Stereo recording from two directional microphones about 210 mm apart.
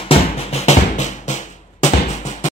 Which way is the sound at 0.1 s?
30° left (ahead or behind).